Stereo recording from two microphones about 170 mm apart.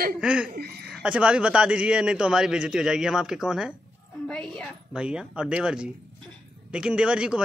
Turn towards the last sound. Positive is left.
turn(degrees=-5)  # may be behind; listen again after turning